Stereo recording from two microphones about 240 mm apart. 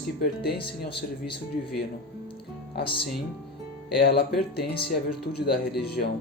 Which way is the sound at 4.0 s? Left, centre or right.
Left.